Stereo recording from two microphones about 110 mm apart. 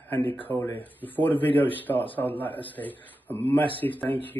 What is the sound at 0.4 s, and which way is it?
Speech, 15° left (ahead or behind).